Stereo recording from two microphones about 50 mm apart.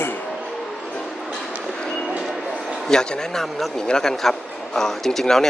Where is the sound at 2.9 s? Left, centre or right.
Centre.